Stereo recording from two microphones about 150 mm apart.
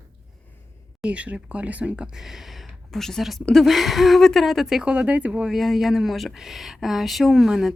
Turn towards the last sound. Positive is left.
turn(degrees=0)  # may be behind; listen again after turning